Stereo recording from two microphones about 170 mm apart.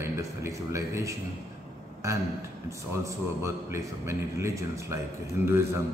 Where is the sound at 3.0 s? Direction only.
15° right (ahead or behind).